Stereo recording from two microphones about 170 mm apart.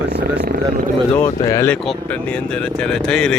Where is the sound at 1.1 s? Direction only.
15° left (ahead or behind).